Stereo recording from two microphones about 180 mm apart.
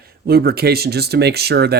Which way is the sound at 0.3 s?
60° right (ahead or behind).